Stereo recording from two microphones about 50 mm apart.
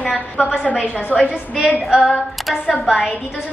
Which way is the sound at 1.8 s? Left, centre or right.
Centre.